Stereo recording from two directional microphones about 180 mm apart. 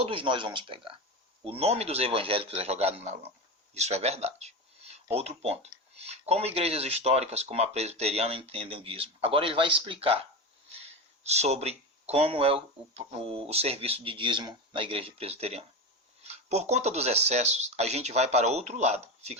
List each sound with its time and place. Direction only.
0.0 s speech: 30° right (ahead or behind)